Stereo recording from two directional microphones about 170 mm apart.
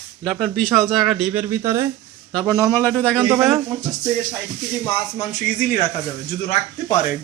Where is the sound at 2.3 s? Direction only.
10° left (ahead or behind).